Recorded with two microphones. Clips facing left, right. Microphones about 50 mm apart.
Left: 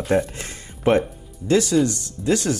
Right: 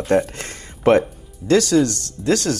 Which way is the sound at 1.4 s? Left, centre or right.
Right.